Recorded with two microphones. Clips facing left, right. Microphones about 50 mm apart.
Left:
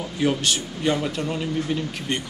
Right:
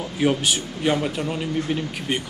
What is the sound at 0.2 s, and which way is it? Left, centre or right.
Speech, centre.